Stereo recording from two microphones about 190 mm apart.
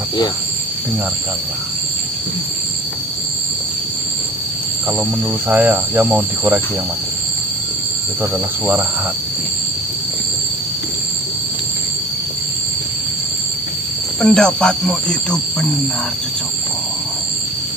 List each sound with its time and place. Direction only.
5.5 s speech: 10° right (ahead or behind)
8.2 s speech: 10° right (ahead or behind)
14.2 s speech: 5° left (ahead or behind)